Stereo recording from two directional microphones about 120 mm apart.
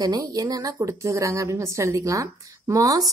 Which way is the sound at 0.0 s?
30° right (ahead or behind).